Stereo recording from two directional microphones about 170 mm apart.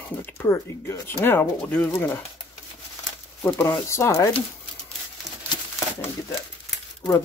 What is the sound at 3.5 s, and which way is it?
Speech, 10° left (ahead or behind).